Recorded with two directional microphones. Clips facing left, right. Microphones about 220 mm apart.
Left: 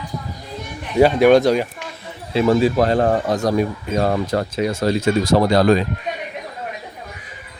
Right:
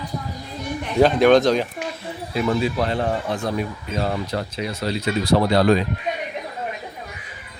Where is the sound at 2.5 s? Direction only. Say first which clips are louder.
Left 7 dB; 45° left (ahead or behind).